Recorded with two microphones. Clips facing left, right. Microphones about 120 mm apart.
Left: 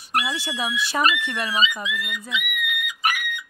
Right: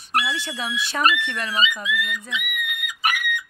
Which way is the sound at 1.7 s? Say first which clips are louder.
Right 3 dB; 25° left (ahead or behind).